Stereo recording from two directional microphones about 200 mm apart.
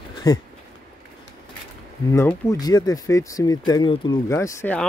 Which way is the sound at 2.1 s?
15° left (ahead or behind).